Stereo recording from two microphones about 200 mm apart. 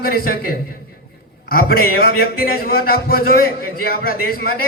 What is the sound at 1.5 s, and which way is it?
A man's voice, 50° left (ahead or behind).